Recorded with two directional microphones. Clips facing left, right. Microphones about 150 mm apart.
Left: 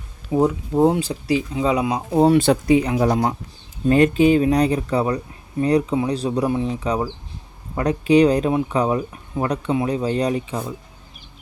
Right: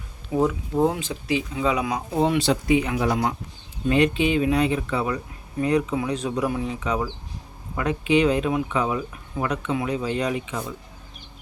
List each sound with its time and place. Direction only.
0.3 s speech: 30° left (ahead or behind)